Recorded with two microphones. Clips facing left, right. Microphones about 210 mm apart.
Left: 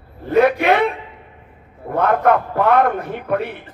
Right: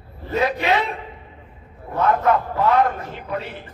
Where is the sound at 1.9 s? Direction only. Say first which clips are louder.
Left 3 dB; 55° left (ahead or behind).